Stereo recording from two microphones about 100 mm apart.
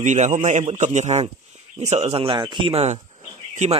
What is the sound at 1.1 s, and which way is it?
Speech, 90° right.